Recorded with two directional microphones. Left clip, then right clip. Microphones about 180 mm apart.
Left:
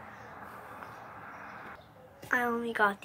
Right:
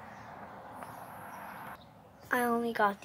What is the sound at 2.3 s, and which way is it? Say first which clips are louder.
Speech: even; 20° right (ahead or behind).